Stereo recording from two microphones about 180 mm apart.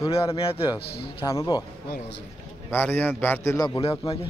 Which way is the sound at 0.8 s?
60° left (ahead or behind).